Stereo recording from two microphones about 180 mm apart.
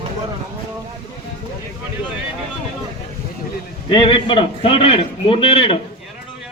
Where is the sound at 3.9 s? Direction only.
30° left (ahead or behind).